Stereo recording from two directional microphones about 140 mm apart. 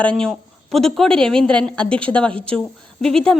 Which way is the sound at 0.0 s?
5° left (ahead or behind).